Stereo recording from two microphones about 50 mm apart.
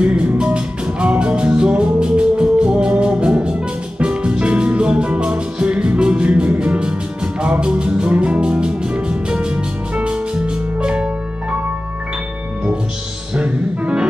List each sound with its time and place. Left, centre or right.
0.0 s music: right
13.3 s music: right